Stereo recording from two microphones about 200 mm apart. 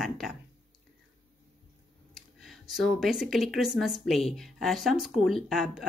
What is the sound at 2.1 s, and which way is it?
Speech, centre (ahead or behind).